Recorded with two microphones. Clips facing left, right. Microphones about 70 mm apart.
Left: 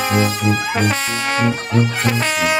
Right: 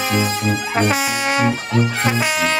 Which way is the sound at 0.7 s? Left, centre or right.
Centre.